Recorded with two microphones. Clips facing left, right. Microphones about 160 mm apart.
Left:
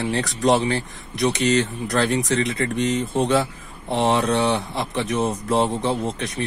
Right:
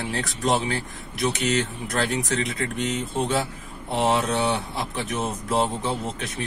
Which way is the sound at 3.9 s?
25° left (ahead or behind).